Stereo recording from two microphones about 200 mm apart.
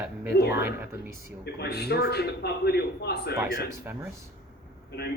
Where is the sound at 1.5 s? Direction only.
55° left (ahead or behind).